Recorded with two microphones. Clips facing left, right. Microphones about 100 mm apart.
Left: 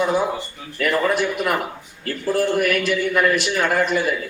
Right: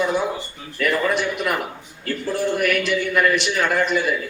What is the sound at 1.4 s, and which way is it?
Speech, 40° left (ahead or behind).